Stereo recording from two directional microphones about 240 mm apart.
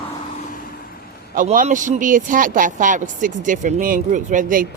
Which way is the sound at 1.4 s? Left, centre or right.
Right.